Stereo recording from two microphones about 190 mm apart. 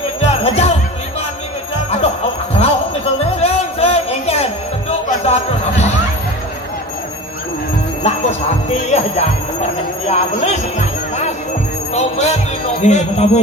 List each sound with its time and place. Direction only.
0.2 s music: 35° left (ahead or behind)
2.6 s a sound: 30° left (ahead or behind)
8.9 s speech: 35° left (ahead or behind)